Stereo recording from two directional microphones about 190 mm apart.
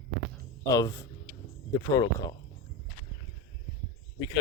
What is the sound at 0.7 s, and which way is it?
Speech, 15° left (ahead or behind).